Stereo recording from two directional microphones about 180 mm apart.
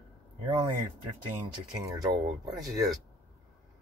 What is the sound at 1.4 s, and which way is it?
Speech, 20° right (ahead or behind).